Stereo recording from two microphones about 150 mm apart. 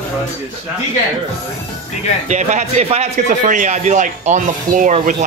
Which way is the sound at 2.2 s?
50° right (ahead or behind).